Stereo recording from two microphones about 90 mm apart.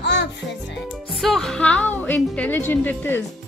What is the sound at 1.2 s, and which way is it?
A woman's voice, 5° left (ahead or behind).